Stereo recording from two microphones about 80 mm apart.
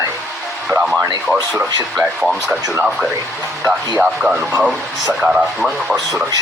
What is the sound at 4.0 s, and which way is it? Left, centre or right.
Speech, centre.